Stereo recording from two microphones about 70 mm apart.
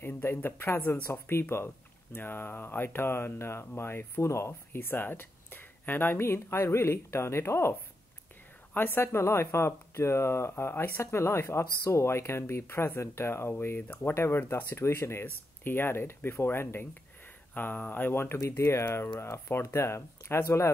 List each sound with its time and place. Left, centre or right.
0.0 s speech: left
8.7 s speech: left